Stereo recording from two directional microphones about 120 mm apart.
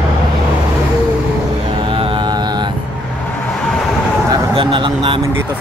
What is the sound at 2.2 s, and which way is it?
Mantra, 35° right (ahead or behind).